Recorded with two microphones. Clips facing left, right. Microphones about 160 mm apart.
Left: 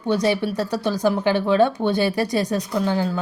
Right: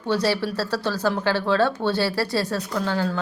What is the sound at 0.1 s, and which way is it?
Speech, 15° left (ahead or behind).